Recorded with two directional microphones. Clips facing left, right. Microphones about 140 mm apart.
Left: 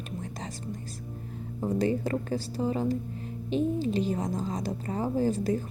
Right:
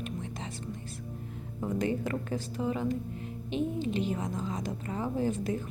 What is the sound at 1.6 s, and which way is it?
A woman's voice, 35° left (ahead or behind).